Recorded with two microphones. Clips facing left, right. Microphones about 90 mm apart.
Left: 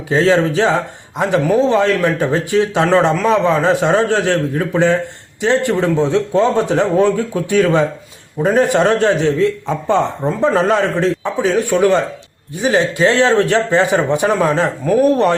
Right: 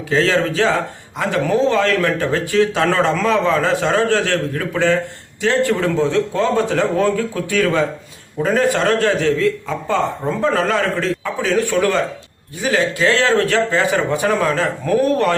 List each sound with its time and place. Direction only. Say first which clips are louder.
0.1 s a man's voice: left 4 dB; 20° left (ahead or behind)